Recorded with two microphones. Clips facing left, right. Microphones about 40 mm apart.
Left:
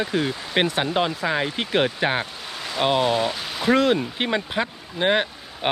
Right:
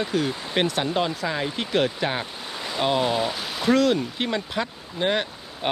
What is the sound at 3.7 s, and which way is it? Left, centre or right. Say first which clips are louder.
Speech: left 2 dB; left.